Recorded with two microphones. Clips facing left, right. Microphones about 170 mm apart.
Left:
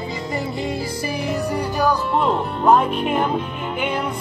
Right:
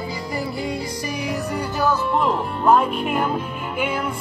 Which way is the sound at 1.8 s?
20° left (ahead or behind).